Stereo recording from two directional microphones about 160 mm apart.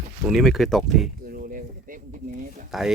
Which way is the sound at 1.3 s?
60° right (ahead or behind).